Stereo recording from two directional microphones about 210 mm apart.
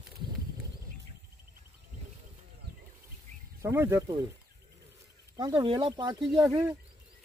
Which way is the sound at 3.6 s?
10° right (ahead or behind).